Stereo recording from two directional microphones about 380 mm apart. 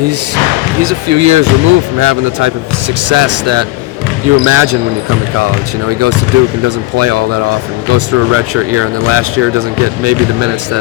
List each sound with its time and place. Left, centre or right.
0.8 s speech: right
5.9 s speech: right